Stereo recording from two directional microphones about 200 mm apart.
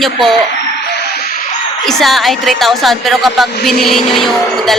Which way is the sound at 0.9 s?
50° left (ahead or behind).